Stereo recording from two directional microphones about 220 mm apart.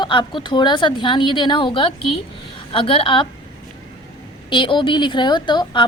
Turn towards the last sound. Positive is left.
turn(degrees=20)  # may be behind; listen again after turning